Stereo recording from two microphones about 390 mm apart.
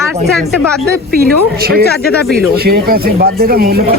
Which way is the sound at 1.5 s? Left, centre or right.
Right.